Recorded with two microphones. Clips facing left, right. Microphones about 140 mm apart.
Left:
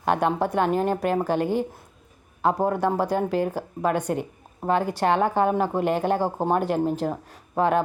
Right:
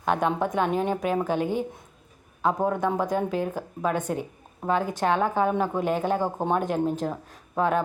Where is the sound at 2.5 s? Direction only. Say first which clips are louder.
Left 2 dB; 10° left (ahead or behind).